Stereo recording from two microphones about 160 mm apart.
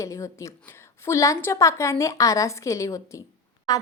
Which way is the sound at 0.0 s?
20° left (ahead or behind).